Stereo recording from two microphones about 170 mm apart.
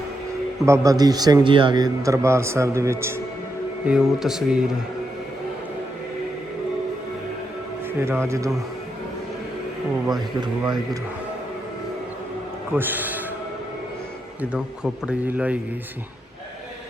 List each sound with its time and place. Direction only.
0.6 s a man's voice: 20° right (ahead or behind)
3.8 s speech: 5° right (ahead or behind)
7.9 s a man's voice: 15° right (ahead or behind)
12.7 s a man's voice: 10° right (ahead or behind)
15.0 s a man's voice: 10° right (ahead or behind)